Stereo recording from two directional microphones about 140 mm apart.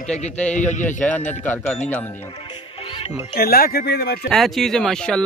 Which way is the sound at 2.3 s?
40° left (ahead or behind).